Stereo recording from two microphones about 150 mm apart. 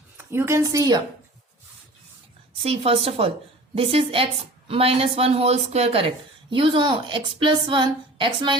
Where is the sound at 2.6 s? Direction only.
40° right (ahead or behind).